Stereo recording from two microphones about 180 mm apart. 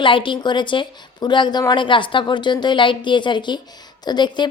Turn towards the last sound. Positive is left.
turn(degrees=25)  # may be behind; listen again after turning